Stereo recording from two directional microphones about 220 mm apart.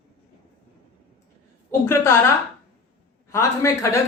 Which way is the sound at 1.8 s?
10° left (ahead or behind).